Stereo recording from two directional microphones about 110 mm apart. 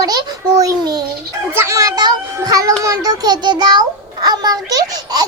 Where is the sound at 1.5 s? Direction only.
25° right (ahead or behind).